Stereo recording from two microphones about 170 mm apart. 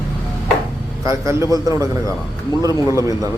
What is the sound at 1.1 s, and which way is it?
Speech, 15° right (ahead or behind).